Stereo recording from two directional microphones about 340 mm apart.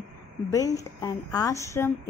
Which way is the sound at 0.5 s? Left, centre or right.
Centre.